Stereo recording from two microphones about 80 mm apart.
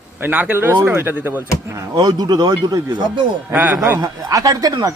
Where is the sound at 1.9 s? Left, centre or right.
Right.